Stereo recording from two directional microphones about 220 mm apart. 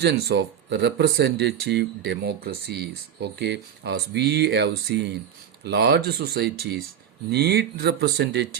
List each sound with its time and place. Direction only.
0.0 s speech: 50° right (ahead or behind)